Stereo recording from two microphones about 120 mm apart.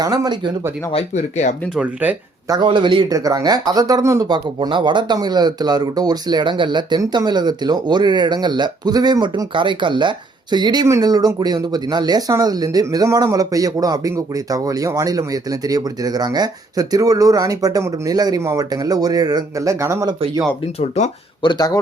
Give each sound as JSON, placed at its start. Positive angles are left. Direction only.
{"t": 0.0, "sound": "speech", "side_deg": -30}
{"t": 0.9, "sound": "speech", "side_deg": 75}
{"t": 2.5, "sound": "speech", "side_deg": -40}
{"t": 3.1, "sound": "speech", "side_deg": -30}
{"t": 20.7, "sound": "speech", "side_deg": 60}
{"t": 21.4, "sound": "speech", "side_deg": 35}